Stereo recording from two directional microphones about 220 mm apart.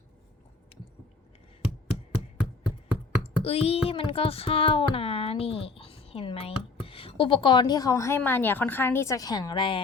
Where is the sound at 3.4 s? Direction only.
25° left (ahead or behind).